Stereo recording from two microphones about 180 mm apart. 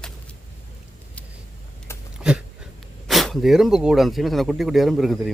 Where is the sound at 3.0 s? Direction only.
Centre (ahead or behind).